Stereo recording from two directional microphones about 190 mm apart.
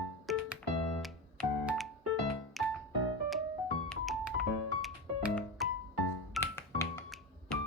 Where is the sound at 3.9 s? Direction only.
Centre (ahead or behind).